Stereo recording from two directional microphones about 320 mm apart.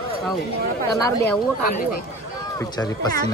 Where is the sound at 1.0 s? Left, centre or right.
Centre.